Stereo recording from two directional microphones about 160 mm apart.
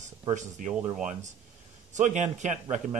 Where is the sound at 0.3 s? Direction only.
50° right (ahead or behind).